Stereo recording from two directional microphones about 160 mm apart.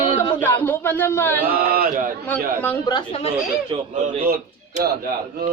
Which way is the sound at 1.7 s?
65° right (ahead or behind).